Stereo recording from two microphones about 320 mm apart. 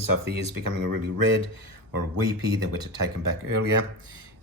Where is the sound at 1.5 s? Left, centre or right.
Right.